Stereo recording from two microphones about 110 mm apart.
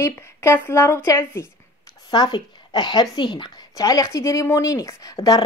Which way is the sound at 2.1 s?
40° left (ahead or behind).